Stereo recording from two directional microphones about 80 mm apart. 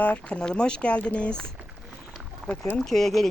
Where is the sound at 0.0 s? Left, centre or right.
Centre.